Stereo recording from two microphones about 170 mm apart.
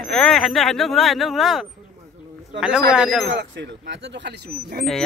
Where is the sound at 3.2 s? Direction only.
90° right.